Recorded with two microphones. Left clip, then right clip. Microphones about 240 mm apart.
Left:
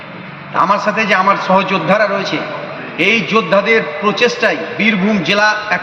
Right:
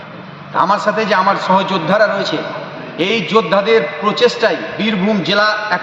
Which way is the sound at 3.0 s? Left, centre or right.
Centre.